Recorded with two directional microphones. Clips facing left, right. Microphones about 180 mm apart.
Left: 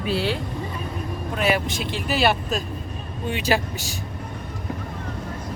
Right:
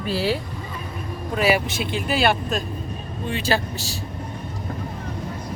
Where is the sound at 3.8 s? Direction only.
35° right (ahead or behind).